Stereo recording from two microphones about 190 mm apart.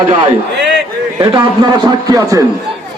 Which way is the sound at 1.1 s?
20° right (ahead or behind).